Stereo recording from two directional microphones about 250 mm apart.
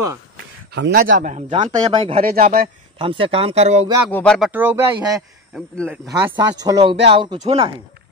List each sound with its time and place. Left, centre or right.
0.7 s speech: right
1.1 s speech: right
2.2 s speech: right
3.0 s speech: right
4.1 s speech: centre
5.5 s speech: centre
6.0 s speech: centre